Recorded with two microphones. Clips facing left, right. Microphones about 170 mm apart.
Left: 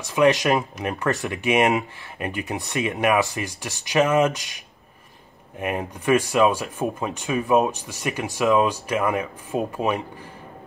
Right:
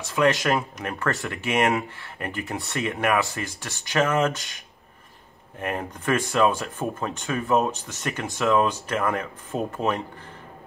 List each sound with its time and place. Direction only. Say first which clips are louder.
0.0 s speech: left 3 dB; 15° left (ahead or behind)
5.6 s speech: left 2 dB; 15° left (ahead or behind)